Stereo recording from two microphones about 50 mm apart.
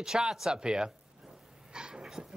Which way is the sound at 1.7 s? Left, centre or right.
Centre.